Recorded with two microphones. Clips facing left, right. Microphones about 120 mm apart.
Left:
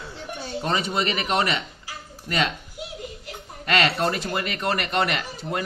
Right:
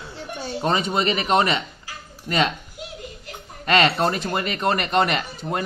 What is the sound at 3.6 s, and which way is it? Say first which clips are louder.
Speech: right 3 dB; 30° right (ahead or behind).